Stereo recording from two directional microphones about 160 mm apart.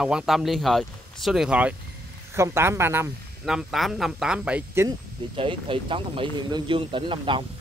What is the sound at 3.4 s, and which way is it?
Speech, centre (ahead or behind).